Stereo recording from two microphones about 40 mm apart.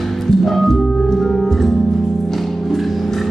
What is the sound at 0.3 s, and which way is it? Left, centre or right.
Music, centre.